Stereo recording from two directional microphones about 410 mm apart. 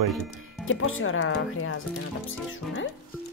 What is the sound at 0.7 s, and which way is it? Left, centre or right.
Speech, left.